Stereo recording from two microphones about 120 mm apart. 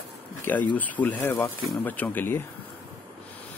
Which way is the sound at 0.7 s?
15° left (ahead or behind).